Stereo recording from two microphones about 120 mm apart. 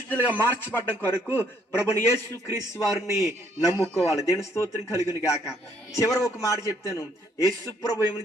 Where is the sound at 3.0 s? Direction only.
25° right (ahead or behind).